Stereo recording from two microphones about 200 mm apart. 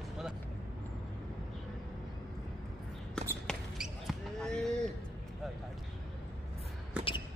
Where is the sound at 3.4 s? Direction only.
Centre (ahead or behind).